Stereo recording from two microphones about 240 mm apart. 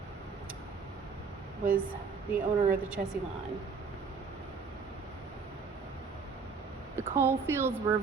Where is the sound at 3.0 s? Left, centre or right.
Right.